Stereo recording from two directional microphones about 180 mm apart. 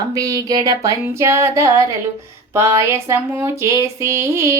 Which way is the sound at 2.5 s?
15° right (ahead or behind).